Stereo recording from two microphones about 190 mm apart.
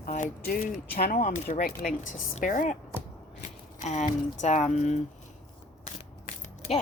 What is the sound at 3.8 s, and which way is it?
Speech, 40° left (ahead or behind).